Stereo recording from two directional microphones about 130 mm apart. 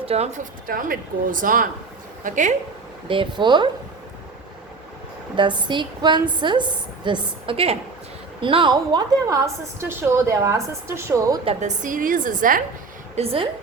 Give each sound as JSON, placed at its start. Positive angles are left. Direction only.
{"t": 0.0, "sound": "speech", "side_deg": -55}
{"t": 2.2, "sound": "speech", "side_deg": -75}
{"t": 3.1, "sound": "a woman's voice", "side_deg": -40}
{"t": 5.4, "sound": "a woman's voice", "side_deg": -35}
{"t": 11.6, "sound": "speech", "side_deg": -85}
{"t": 13.1, "sound": "a woman's voice", "side_deg": -45}